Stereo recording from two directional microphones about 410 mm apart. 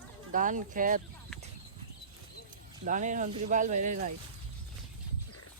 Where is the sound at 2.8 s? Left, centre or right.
Centre.